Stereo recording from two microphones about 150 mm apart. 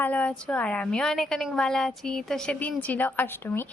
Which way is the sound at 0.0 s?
10° left (ahead or behind).